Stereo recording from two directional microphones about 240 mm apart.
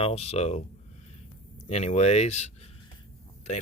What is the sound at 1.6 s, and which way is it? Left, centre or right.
Speech, left.